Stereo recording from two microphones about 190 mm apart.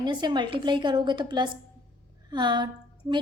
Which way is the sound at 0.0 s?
25° right (ahead or behind).